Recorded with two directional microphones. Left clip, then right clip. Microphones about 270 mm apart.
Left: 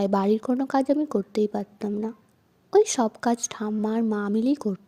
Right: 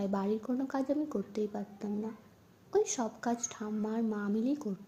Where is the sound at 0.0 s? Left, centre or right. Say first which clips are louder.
Left 11 dB; left.